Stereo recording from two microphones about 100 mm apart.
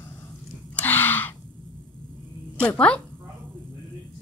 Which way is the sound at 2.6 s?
10° left (ahead or behind).